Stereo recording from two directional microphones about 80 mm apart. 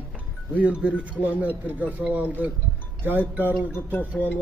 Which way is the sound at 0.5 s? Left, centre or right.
Centre.